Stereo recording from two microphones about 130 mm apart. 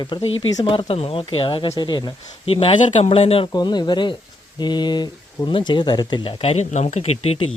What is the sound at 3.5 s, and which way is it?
Speech, 35° left (ahead or behind).